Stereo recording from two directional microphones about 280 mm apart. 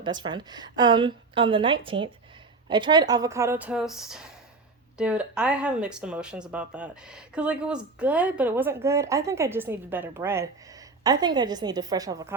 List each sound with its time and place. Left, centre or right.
0.0 s a woman's voice: centre